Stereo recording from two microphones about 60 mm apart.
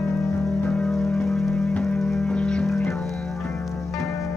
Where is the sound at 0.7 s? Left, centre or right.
Left.